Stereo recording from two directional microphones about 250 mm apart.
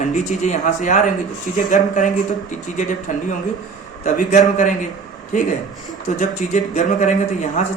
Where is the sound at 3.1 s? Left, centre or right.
Left.